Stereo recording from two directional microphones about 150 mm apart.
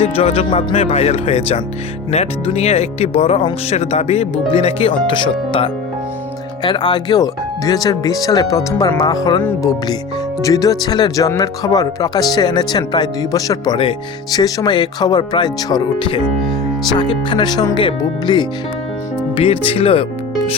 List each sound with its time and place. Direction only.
0.0 s speech: 40° left (ahead or behind)
9.4 s speech: 15° left (ahead or behind); by 20.1 s 40° left (ahead or behind)